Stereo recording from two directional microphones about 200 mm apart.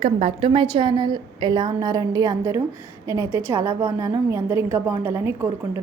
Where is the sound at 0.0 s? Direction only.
30° right (ahead or behind).